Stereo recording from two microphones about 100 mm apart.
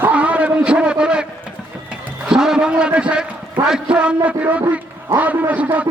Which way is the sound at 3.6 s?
10° right (ahead or behind).